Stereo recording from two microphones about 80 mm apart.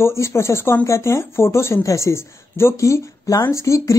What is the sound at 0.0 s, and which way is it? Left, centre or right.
Speech, left.